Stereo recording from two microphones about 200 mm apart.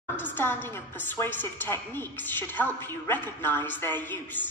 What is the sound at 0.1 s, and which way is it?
A woman's voice, 10° left (ahead or behind).